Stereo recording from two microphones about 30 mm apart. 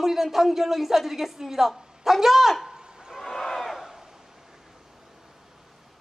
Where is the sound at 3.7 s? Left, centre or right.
Centre.